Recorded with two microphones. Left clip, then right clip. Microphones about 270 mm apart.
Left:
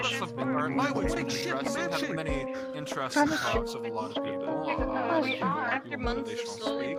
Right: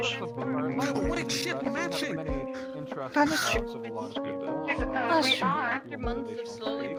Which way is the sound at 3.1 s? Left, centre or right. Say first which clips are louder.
Right 2 dB; centre.